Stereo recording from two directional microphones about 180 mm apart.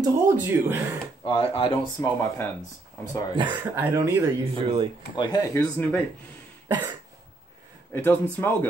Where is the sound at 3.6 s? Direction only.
10° right (ahead or behind).